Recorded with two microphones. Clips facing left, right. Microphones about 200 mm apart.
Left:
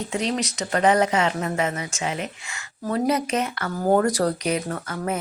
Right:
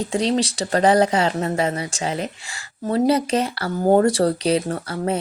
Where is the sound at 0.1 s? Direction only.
30° right (ahead or behind).